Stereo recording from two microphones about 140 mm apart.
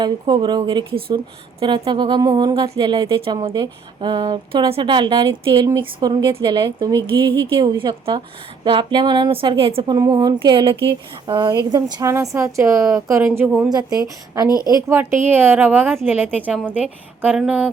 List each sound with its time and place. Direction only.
0.0 s speech: 35° right (ahead or behind)
9.9 s a woman's voice: 30° right (ahead or behind)
14.7 s a woman's voice: 25° right (ahead or behind)